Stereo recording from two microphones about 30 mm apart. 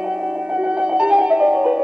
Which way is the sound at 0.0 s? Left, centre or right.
Right.